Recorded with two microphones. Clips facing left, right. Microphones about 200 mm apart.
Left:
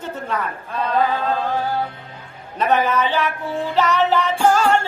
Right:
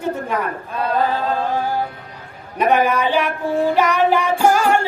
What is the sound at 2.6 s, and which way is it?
A man's voice, 10° right (ahead or behind).